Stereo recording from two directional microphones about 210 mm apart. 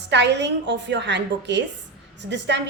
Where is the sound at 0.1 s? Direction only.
55° right (ahead or behind).